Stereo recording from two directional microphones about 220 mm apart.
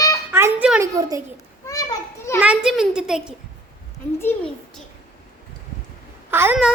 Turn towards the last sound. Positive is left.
turn(degrees=-5)  # may be behind; listen again after turning